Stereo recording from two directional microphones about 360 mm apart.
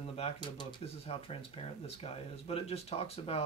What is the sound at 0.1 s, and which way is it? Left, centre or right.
Speech, centre.